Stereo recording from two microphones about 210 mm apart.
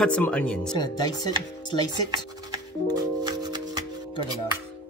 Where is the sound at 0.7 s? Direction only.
20° left (ahead or behind).